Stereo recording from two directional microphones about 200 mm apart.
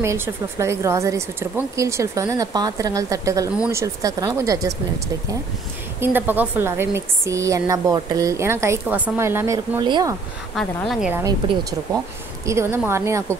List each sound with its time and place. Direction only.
0.0 s a woman's voice: 15° right (ahead or behind)
5.9 s a woman's voice: 10° right (ahead or behind)
10.5 s a woman's voice: centre (ahead or behind)
11.2 s a woman's voice: 20° right (ahead or behind)